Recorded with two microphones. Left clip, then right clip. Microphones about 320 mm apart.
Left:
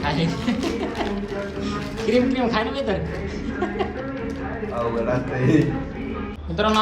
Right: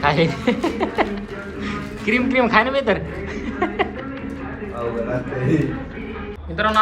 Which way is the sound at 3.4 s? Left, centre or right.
Centre.